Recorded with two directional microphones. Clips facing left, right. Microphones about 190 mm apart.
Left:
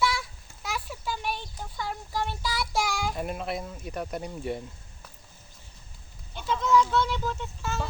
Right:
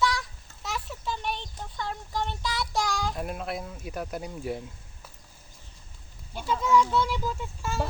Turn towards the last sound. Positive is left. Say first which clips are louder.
# even
turn(degrees=-10)  # may be behind; listen again after turning